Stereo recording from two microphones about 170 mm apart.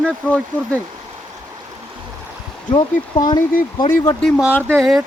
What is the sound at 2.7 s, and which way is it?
Speech, 25° left (ahead or behind).